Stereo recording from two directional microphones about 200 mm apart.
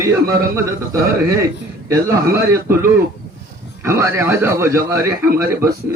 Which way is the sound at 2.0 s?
15° right (ahead or behind).